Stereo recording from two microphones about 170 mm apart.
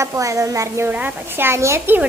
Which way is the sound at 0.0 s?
20° right (ahead or behind).